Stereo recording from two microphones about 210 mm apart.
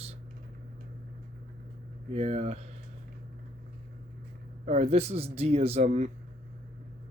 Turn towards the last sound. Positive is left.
turn(degrees=-30)  # may be behind; listen again after turning